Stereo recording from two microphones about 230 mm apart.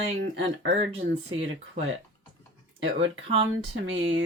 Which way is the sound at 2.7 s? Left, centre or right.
Right.